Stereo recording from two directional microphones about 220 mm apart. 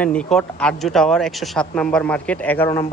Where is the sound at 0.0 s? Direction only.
5° left (ahead or behind).